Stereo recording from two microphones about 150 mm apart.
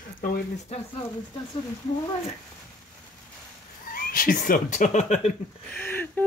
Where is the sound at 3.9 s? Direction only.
70° left (ahead or behind); by 5.3 s 50° left (ahead or behind).